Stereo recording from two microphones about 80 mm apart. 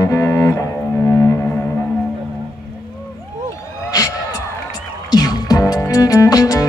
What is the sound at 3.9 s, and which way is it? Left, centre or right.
Crowd, left.